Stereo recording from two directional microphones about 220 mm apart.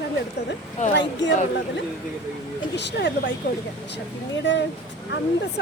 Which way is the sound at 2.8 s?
50° left (ahead or behind).